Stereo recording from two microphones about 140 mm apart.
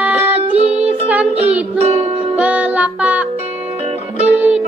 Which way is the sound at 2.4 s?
10° right (ahead or behind).